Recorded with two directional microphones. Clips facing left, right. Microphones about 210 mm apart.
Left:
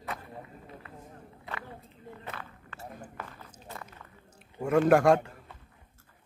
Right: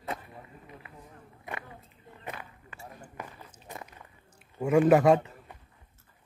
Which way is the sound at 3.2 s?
15° right (ahead or behind).